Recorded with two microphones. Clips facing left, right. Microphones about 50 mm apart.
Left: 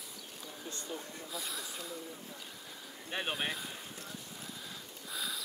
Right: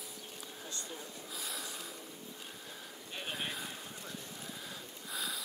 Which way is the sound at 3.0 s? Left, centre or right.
Left.